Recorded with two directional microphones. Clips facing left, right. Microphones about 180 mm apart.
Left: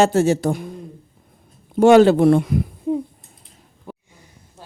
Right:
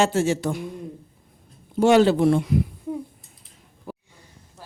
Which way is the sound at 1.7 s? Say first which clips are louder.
Left 5 dB; 50° left (ahead or behind).